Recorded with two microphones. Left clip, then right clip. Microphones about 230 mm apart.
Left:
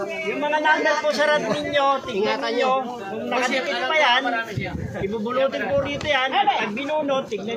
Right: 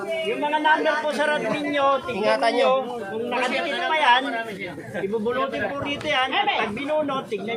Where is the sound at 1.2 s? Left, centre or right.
Left.